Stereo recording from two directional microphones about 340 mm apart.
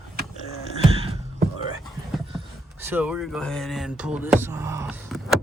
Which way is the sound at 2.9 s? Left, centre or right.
Centre.